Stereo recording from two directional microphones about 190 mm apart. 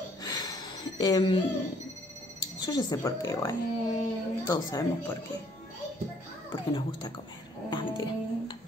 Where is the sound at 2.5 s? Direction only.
25° left (ahead or behind).